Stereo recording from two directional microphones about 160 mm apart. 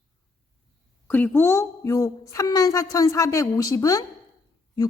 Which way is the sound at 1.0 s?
10° left (ahead or behind).